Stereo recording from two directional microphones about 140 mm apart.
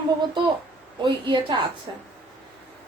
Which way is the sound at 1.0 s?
35° right (ahead or behind).